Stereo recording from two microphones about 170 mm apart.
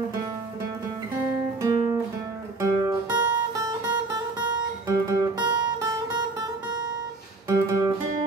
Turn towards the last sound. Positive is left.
turn(degrees=-20)  # may be behind; listen again after turning